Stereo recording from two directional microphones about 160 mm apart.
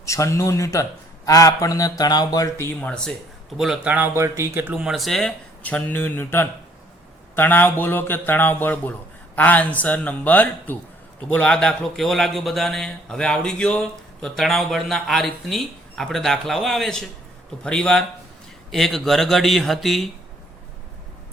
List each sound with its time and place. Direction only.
0.0 s a man's voice: 20° left (ahead or behind)
3.6 s a man's voice: 5° right (ahead or behind)